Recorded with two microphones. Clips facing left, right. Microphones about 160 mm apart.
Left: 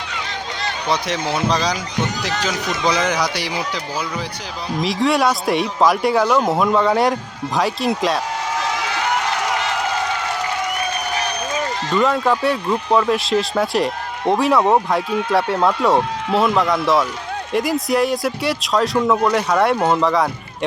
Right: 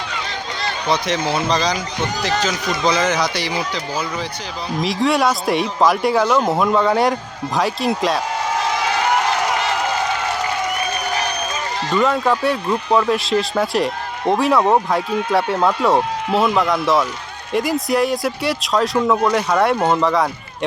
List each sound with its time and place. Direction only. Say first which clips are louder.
0.9 s speech: right 2 dB; 5° left (ahead or behind)
4.8 s speech: even; centre (ahead or behind)
11.9 s speech: even; centre (ahead or behind)